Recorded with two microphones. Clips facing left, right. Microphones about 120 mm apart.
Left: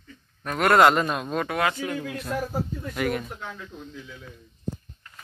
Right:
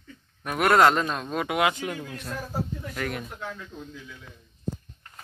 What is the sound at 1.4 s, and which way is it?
Speech, 15° right (ahead or behind).